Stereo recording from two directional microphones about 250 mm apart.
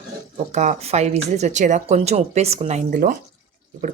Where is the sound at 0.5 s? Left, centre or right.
Right.